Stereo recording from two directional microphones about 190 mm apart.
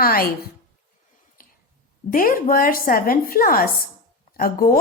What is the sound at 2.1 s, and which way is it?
Speech, 45° left (ahead or behind).